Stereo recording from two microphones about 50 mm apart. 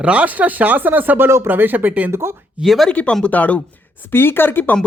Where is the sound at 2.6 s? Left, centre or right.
Centre.